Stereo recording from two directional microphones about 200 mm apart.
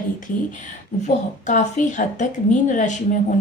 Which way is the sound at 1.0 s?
40° left (ahead or behind).